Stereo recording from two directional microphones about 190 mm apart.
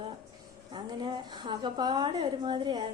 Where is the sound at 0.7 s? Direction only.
25° right (ahead or behind).